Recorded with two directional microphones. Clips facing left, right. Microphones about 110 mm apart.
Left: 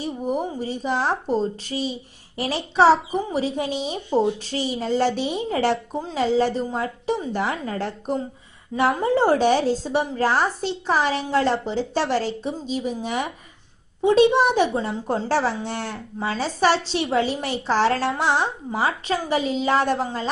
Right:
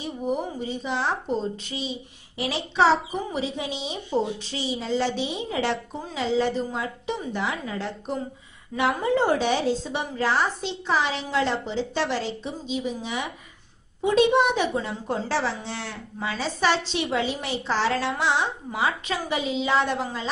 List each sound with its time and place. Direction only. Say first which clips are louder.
0.0 s a woman's voice: left 2 dB; 40° left (ahead or behind)
14.0 s speech: left 3 dB; 30° left (ahead or behind); by 16.0 s 50° left (ahead or behind)
16.2 s a woman's voice: left 4 dB; 40° left (ahead or behind)